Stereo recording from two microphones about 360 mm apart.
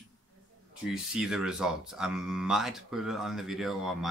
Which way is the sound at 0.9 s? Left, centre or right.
Centre.